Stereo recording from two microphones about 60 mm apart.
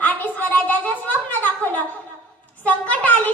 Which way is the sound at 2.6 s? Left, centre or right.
Left.